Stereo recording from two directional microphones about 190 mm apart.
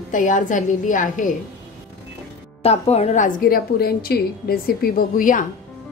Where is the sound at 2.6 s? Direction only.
35° left (ahead or behind).